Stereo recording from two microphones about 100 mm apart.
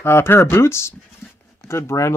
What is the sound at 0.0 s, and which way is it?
Speech, 25° left (ahead or behind).